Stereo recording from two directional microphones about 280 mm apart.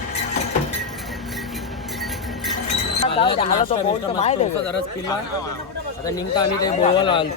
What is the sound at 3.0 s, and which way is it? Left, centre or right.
A man's voice, centre.